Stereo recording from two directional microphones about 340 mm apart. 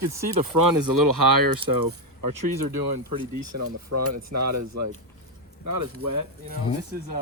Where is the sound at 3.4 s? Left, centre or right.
Right.